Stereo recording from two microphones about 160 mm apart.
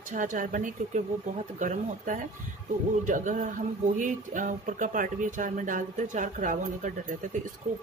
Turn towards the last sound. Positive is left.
turn(degrees=-50)  # may be behind; listen again after turning